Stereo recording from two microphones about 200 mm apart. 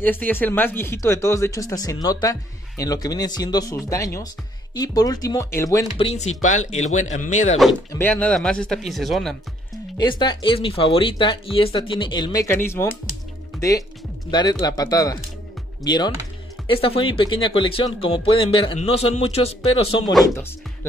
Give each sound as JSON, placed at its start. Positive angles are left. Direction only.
{"t": 0.0, "sound": "speech", "side_deg": 10}
{"t": 5.9, "sound": "a man's voice", "side_deg": 35}
{"t": 7.9, "sound": "speech", "side_deg": 10}
{"t": 9.9, "sound": "speech", "side_deg": 20}